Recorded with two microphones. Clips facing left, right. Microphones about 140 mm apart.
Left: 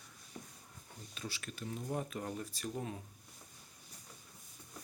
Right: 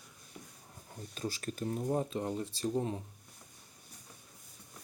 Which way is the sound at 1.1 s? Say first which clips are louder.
Right 8 dB; 40° right (ahead or behind).